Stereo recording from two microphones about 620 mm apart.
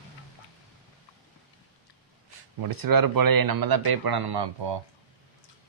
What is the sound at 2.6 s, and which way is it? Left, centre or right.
Speech, right.